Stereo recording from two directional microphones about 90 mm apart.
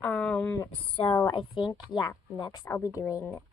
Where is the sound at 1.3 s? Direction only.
65° left (ahead or behind).